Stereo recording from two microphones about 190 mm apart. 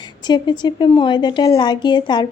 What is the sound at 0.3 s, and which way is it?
A woman's voice, 25° left (ahead or behind).